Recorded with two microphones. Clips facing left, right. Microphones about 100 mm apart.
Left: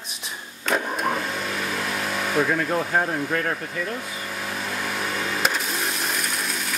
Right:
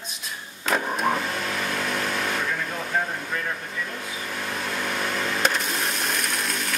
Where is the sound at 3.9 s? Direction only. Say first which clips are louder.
Left 2 dB; centre (ahead or behind).